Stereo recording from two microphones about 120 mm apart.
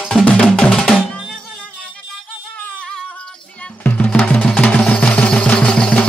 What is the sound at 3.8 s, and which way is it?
Music, 10° left (ahead or behind).